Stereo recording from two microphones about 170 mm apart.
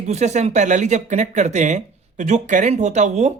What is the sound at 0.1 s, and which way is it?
Speech, 40° right (ahead or behind).